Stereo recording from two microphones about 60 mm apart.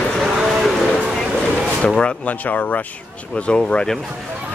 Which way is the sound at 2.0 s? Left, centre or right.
Left.